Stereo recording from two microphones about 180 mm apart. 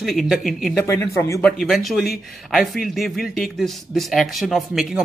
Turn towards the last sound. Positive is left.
turn(degrees=0)  # may be behind; listen again after turning